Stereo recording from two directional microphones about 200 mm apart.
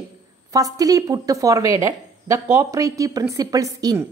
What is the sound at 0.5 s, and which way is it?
A woman's voice, 15° right (ahead or behind).